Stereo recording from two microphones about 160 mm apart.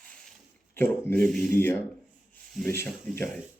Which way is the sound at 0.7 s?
15° left (ahead or behind).